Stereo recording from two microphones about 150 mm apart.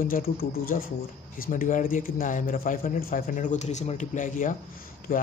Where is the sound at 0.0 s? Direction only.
70° left (ahead or behind).